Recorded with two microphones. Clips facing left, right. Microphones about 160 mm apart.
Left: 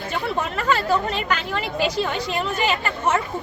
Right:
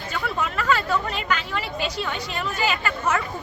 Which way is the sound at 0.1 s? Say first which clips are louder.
Left 2 dB; 30° left (ahead or behind).